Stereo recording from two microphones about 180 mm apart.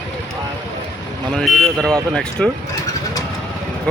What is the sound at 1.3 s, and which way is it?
Speech, 5° left (ahead or behind).